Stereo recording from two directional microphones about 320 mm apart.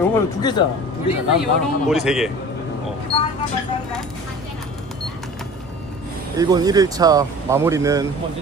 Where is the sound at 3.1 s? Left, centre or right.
Centre.